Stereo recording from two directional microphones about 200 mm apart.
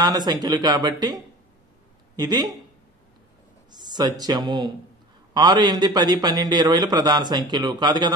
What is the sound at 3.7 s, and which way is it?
A man's voice, 20° right (ahead or behind).